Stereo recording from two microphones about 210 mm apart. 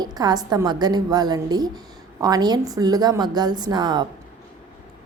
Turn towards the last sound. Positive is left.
turn(degrees=-20)  # may be behind; listen again after turning